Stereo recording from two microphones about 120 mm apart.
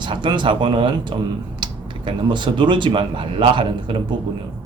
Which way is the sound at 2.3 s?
40° right (ahead or behind).